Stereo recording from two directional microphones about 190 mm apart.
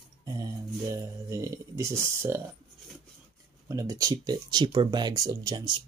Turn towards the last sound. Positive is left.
turn(degrees=-20)  # may be behind; listen again after turning